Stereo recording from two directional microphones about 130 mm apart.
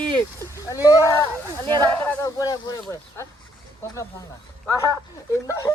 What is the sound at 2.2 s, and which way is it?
Speech, 30° left (ahead or behind).